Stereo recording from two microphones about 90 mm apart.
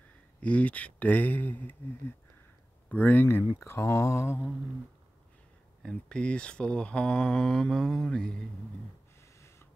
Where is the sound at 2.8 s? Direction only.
20° left (ahead or behind).